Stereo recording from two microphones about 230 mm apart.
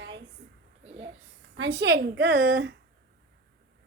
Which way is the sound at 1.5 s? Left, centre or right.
Right.